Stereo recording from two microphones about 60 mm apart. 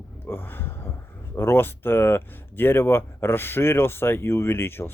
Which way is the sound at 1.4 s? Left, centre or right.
Left.